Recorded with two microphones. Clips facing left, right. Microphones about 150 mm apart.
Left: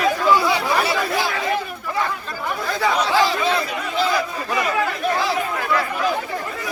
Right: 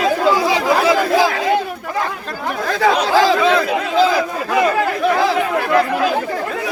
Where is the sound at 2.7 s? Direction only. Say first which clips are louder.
Right 5 dB; 90° right.